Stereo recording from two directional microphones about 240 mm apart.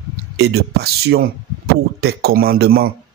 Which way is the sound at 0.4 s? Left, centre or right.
Right.